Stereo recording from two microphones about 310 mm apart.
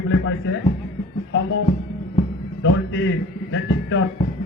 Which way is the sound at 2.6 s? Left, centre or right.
Left.